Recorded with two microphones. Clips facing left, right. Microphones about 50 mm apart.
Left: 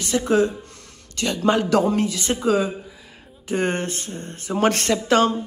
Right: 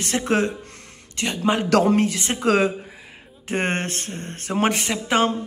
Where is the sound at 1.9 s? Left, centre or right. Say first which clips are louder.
Right 2 dB; right.